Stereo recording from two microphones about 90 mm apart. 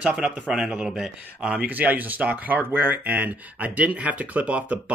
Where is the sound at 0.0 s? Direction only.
10° right (ahead or behind).